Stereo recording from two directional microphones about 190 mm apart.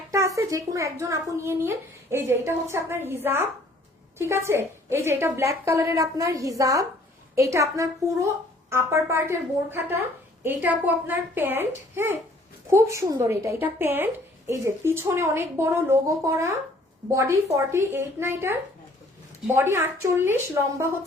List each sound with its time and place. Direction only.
0.1 s a woman's voice: 15° right (ahead or behind)